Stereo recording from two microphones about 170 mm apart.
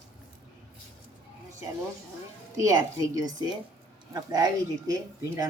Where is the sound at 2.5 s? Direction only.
20° right (ahead or behind).